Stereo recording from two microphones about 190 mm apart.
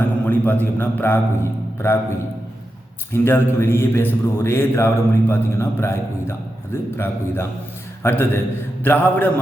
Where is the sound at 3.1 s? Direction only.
10° left (ahead or behind).